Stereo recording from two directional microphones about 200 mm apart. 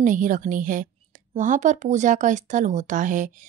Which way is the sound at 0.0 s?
40° right (ahead or behind).